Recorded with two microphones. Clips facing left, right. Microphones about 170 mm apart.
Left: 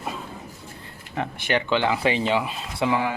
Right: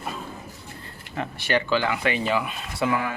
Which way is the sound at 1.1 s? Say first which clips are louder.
Even; 15° left (ahead or behind).